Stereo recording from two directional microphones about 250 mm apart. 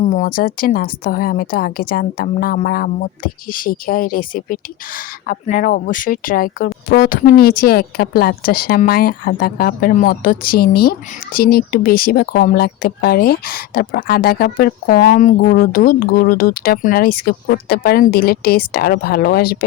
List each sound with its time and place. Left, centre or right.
0.0 s speech: left